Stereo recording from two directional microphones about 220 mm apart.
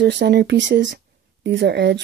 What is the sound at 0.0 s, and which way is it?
Speech, 50° right (ahead or behind).